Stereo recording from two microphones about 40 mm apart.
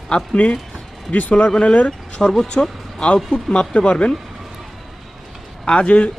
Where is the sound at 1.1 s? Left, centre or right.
Left.